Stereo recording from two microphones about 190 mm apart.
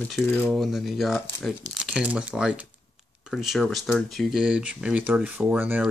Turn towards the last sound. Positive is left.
turn(degrees=-10)  # may be behind; listen again after turning